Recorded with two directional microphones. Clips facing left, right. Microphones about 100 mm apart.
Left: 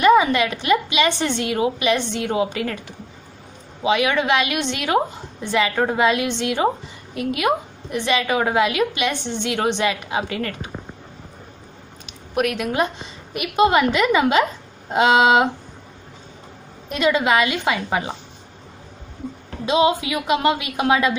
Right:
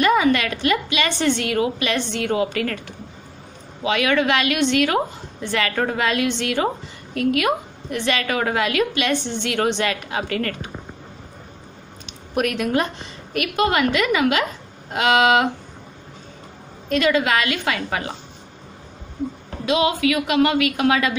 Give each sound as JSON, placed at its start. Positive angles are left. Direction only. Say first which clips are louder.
{"t": 0.0, "sound": "a woman's voice", "louder": "left 3 dB", "side_deg": 20}
{"t": 3.8, "sound": "a woman's voice", "louder": "even", "side_deg": 15}
{"t": 12.1, "sound": "a woman's voice", "louder": "left 1 dB", "side_deg": 5}
{"t": 16.9, "sound": "a woman's voice", "louder": "even", "side_deg": 20}
{"t": 19.6, "sound": "a woman's voice", "louder": "left 1 dB", "side_deg": 25}